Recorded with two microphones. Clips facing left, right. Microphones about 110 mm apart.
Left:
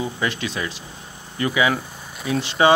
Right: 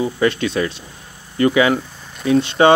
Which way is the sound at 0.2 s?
50° right (ahead or behind).